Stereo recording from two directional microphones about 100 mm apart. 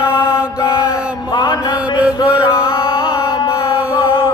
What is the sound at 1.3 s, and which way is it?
Mantra, 45° left (ahead or behind).